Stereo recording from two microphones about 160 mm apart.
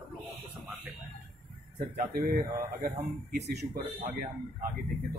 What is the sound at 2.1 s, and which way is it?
Speech, 60° right (ahead or behind).